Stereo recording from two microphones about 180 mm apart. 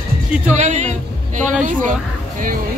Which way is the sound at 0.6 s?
40° right (ahead or behind).